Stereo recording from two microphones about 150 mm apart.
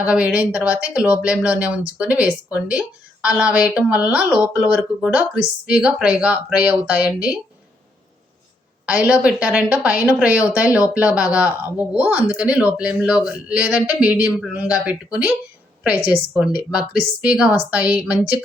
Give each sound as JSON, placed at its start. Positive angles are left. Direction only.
{"t": 0.0, "sound": "speech", "side_deg": -10}
{"t": 8.9, "sound": "speech", "side_deg": -10}